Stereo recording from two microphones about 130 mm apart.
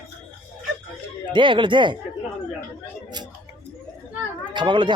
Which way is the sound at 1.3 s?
40° right (ahead or behind).